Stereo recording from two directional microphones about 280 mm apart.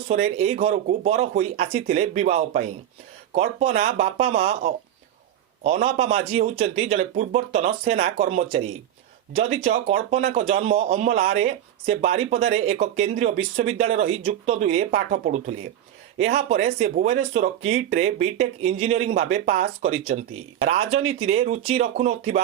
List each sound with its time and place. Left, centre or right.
0.1 s speech: right